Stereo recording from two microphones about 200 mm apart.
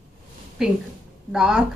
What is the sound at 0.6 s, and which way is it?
A woman's voice, centre (ahead or behind).